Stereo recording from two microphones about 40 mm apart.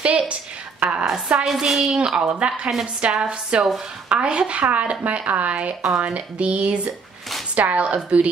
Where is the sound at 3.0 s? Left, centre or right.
Right.